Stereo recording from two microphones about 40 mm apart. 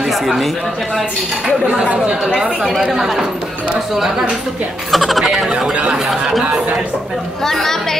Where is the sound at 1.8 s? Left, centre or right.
Right.